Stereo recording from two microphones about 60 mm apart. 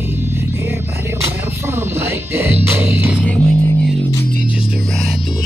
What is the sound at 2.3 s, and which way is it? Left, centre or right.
Music, right.